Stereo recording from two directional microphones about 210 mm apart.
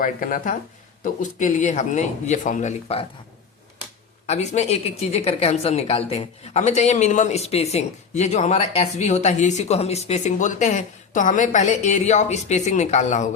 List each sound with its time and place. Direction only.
0.0 s a woman's voice: 40° left (ahead or behind)
4.3 s a woman's voice: 30° left (ahead or behind)